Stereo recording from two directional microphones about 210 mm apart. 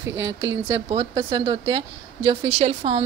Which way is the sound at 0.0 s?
15° right (ahead or behind).